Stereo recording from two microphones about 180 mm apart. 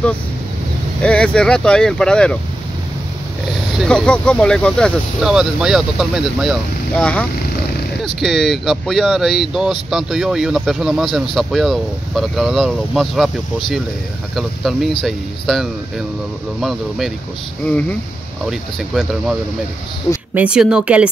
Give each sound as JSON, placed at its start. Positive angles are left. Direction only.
{"t": 1.0, "sound": "speech", "side_deg": 5}
{"t": 3.7, "sound": "speech", "side_deg": 5}
{"t": 7.0, "sound": "speech", "side_deg": 5}
{"t": 14.3, "sound": "speech", "side_deg": 0}
{"t": 17.6, "sound": "speech", "side_deg": 5}
{"t": 20.3, "sound": "speech", "side_deg": -5}